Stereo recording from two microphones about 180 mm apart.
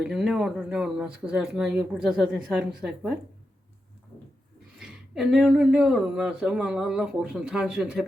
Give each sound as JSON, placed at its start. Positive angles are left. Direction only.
{"t": 0.0, "sound": "speech", "side_deg": -5}
{"t": 4.8, "sound": "speech", "side_deg": 0}